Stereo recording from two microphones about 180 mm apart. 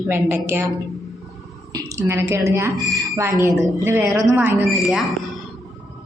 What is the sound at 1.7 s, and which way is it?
A woman's voice, 15° right (ahead or behind).